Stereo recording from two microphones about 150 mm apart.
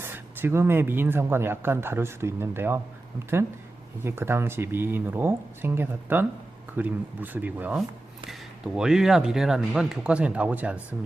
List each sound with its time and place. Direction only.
0.0 s speech: 15° right (ahead or behind)
4.0 s speech: 15° right (ahead or behind)